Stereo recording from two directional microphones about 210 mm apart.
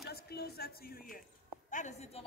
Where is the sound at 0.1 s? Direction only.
50° left (ahead or behind).